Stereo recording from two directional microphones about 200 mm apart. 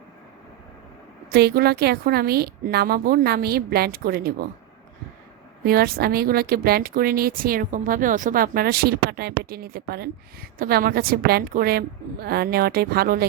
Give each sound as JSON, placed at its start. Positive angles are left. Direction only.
{"t": 1.3, "sound": "speech", "side_deg": -50}
{"t": 5.6, "sound": "speech", "side_deg": -50}